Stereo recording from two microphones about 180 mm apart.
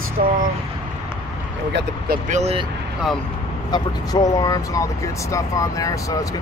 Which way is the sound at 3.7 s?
20° left (ahead or behind).